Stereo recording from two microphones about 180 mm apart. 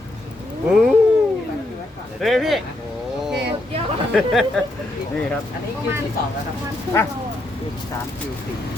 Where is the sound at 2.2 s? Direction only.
Centre (ahead or behind).